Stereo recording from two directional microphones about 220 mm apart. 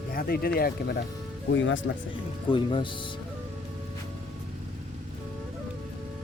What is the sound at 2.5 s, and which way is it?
Speech, 25° left (ahead or behind).